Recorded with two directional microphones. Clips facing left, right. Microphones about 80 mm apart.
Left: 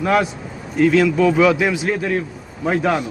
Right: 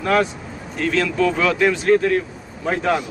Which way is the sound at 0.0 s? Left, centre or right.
Centre.